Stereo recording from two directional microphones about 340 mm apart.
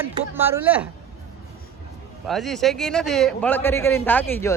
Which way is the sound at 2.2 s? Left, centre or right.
Centre.